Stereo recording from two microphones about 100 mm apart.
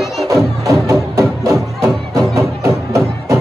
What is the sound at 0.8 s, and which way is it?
Music, 30° right (ahead or behind).